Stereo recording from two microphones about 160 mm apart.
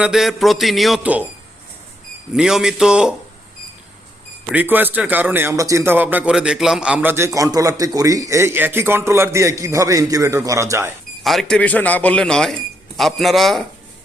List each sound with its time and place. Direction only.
0.0 s a man's voice: 5° right (ahead or behind)
2.3 s a man's voice: 5° right (ahead or behind)
4.5 s a man's voice: 10° right (ahead or behind)
11.2 s a man's voice: centre (ahead or behind)